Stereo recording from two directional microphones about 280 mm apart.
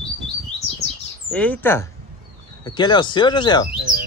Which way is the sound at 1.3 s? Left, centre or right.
Centre.